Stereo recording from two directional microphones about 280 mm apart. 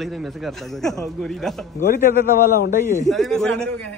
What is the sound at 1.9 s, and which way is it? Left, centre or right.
A man's voice, left.